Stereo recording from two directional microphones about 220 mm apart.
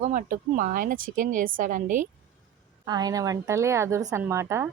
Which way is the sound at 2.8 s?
20° right (ahead or behind).